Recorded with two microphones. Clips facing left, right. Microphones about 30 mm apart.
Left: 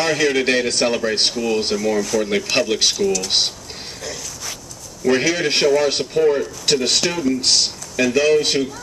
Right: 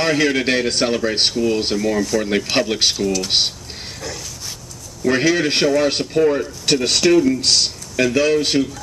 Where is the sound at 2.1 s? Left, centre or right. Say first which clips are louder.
Even; right.